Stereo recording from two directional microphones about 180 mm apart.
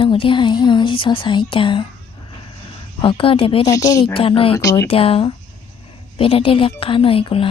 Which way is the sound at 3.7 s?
20° left (ahead or behind).